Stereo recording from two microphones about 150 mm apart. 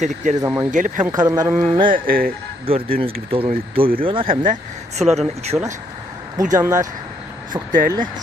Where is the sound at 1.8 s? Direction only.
70° right (ahead or behind).